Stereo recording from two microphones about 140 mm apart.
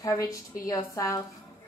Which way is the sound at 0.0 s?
25° left (ahead or behind).